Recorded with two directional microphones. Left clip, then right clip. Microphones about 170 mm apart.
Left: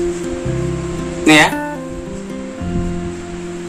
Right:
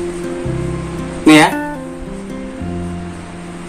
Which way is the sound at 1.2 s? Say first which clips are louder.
Right 1 dB; 5° left (ahead or behind).